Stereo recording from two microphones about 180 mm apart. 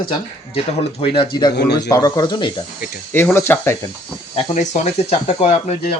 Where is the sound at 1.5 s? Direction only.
70° left (ahead or behind).